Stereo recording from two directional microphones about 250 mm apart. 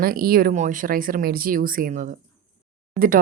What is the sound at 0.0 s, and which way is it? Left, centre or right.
Speech, right.